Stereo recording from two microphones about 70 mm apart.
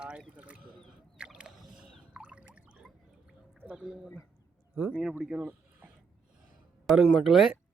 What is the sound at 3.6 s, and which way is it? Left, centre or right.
Speech, centre.